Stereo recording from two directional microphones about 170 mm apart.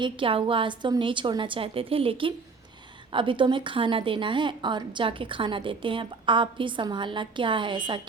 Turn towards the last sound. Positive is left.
turn(degrees=-30)  # may be behind; listen again after turning